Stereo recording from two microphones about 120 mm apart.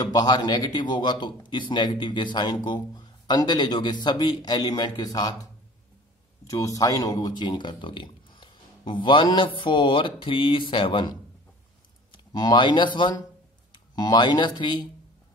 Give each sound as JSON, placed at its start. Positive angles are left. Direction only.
{"t": 0.0, "sound": "a man's voice", "side_deg": 35}